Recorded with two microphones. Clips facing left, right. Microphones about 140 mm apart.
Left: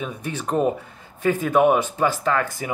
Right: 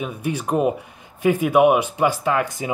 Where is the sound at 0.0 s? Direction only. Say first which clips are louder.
Right 3 dB; 10° right (ahead or behind).